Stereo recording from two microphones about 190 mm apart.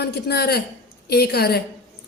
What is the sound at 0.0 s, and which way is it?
A woman's voice, 60° left (ahead or behind).